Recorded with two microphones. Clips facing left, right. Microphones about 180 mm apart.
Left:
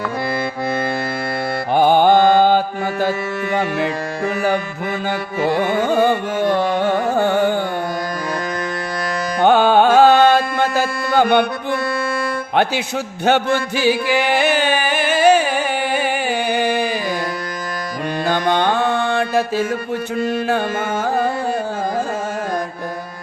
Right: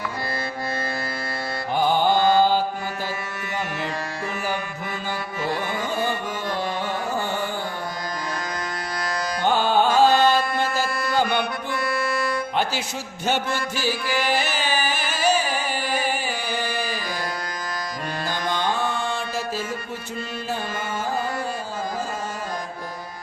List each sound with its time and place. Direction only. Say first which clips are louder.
1.7 s mantra: left 8 dB; 65° left (ahead or behind)
3.5 s music: left 9 dB; 60° left (ahead or behind)
5.4 s carnatic music: left 10 dB; 60° left (ahead or behind)
9.4 s carnatic music: left 8 dB; 65° left (ahead or behind)
13.2 s music: left 8 dB; 65° left (ahead or behind)
18.3 s music: left 8 dB; 60° left (ahead or behind)
21.0 s carnatic music: left 7 dB; 60° left (ahead or behind)